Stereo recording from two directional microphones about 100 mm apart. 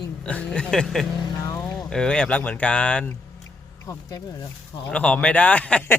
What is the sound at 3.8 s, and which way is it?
Speech, 35° left (ahead or behind).